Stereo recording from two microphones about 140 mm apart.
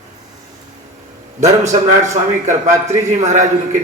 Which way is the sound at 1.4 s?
55° right (ahead or behind).